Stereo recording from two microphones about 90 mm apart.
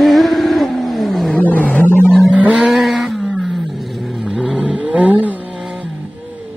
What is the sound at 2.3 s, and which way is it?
Vehicle, 10° right (ahead or behind).